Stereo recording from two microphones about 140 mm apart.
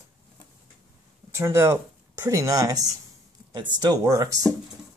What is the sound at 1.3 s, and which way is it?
Speech, 20° right (ahead or behind).